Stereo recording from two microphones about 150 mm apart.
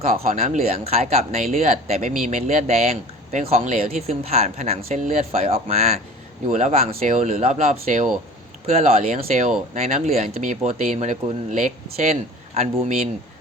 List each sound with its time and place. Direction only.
0.3 s speech: 60° right (ahead or behind)
0.9 s speech: 45° right (ahead or behind)